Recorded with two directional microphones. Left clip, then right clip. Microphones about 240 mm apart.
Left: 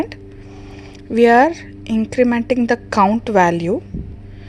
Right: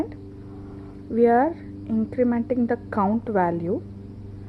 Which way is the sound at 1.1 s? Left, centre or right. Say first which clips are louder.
Left 7 dB; left.